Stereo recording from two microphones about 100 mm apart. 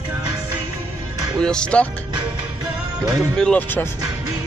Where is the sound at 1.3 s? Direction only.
10° left (ahead or behind).